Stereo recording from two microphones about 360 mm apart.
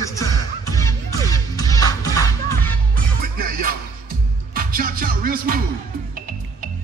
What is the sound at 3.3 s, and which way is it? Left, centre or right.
Music, right.